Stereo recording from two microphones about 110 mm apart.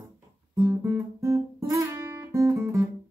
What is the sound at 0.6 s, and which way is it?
Guitar, 20° right (ahead or behind).